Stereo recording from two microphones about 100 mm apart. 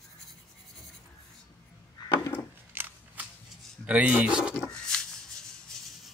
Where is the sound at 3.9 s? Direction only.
15° right (ahead or behind).